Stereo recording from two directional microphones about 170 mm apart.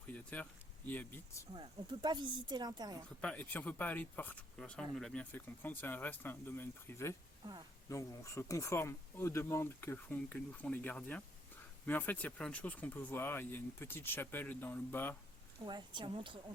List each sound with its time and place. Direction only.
0.3 s speech: 10° left (ahead or behind)
1.5 s speech: 25° right (ahead or behind)
3.2 s speech: 10° left (ahead or behind)
15.6 s speech: 25° right (ahead or behind)